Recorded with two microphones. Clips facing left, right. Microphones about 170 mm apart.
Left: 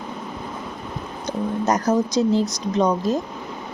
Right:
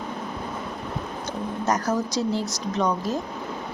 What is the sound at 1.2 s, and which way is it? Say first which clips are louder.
Speech: left 7 dB; 20° left (ahead or behind).